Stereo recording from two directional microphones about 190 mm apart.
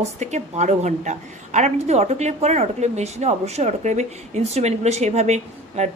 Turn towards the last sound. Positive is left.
turn(degrees=-35)  # may be behind; listen again after turning